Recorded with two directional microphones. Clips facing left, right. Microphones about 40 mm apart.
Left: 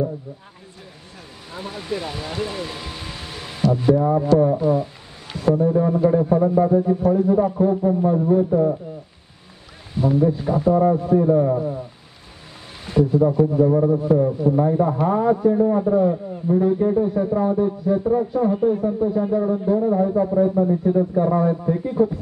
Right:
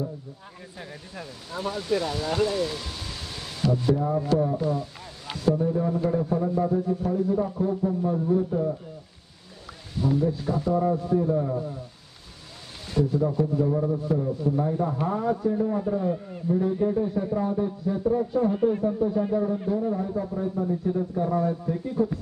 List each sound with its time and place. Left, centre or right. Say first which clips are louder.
1.5 s a man's voice: right 2 dB; centre
4.3 s a man's voice: left 8 dB; left
5.4 s a man's voice: left 6 dB; left
8.5 s speech: left 8 dB; left
9.9 s a man's voice: left 6 dB; left
10.7 s a man's voice: left 7 dB; left
11.5 s a man's voice: left 7 dB; left
12.8 s a man's voice: left 7 dB; left
14.6 s a man's voice: left 7 dB; left
18.3 s speech: left 4 dB; centre
19.3 s a man's voice: left 5 dB; centre
19.9 s a man's voice: left 9 dB; left